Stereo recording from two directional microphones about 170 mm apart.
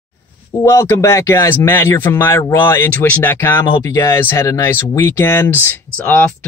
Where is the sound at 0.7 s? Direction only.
15° left (ahead or behind).